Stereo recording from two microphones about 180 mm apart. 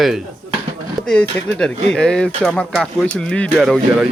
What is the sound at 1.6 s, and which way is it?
Speech, 5° left (ahead or behind).